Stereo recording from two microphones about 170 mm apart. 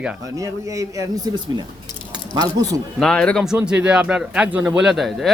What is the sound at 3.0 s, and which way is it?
A man's voice, 5° left (ahead or behind).